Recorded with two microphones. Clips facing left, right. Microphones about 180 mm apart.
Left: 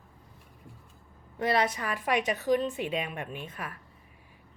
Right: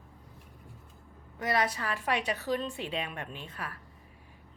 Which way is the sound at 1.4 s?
25° left (ahead or behind).